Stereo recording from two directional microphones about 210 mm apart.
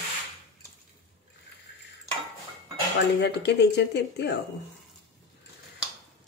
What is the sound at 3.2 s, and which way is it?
Speech, 55° left (ahead or behind).